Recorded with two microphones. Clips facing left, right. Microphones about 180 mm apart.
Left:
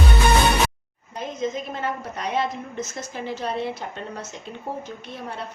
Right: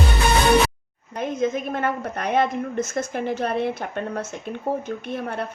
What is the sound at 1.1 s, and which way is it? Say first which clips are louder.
A woman's voice: right 4 dB; 55° right (ahead or behind).